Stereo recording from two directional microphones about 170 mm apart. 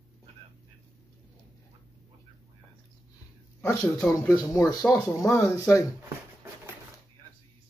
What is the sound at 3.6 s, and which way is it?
Speech, 20° left (ahead or behind).